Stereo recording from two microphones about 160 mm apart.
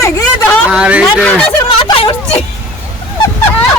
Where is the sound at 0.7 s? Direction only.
5° right (ahead or behind).